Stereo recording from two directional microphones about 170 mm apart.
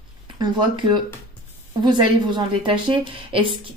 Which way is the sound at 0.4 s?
25° right (ahead or behind).